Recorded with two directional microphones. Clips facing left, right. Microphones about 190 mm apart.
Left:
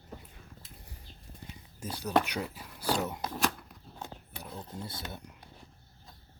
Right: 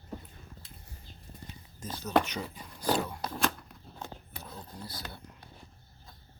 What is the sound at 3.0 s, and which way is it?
Cutlery, 20° left (ahead or behind).